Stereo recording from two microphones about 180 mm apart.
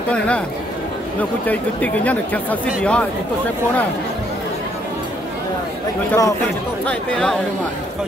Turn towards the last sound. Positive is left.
turn(degrees=5)  # may be behind; listen again after turning